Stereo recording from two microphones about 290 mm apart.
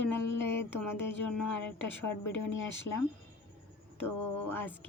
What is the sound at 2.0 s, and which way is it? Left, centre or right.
Speech, left.